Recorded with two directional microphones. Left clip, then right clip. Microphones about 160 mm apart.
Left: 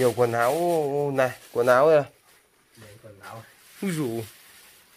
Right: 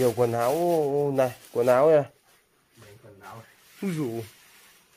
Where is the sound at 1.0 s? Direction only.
20° right (ahead or behind).